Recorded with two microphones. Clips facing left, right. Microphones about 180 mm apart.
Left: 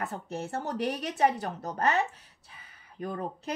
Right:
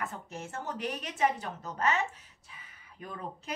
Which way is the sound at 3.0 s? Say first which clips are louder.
Left 7 dB; 35° left (ahead or behind).